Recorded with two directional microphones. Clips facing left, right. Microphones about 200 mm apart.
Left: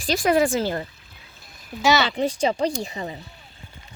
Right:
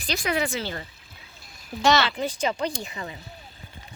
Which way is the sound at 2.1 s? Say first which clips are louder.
Left 5 dB; 30° left (ahead or behind).